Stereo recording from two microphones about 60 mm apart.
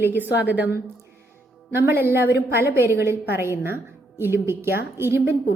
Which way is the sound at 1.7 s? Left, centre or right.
Right.